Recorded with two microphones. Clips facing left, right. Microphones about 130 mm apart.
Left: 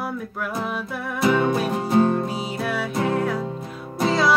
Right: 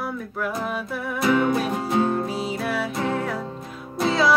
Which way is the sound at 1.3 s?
25° left (ahead or behind).